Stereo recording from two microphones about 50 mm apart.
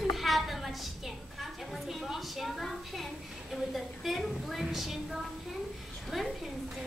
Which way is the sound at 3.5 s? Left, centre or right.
Centre.